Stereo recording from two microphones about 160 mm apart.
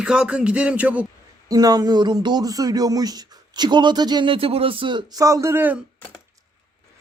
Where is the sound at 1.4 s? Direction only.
25° right (ahead or behind).